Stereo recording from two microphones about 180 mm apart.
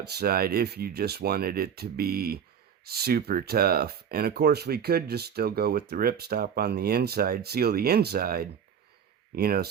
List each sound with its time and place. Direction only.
0.0 s speech: 60° right (ahead or behind)